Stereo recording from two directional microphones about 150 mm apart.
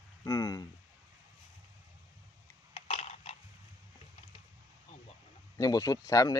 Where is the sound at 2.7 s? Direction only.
45° left (ahead or behind).